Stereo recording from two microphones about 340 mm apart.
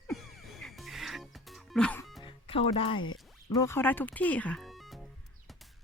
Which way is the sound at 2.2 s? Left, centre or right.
Centre.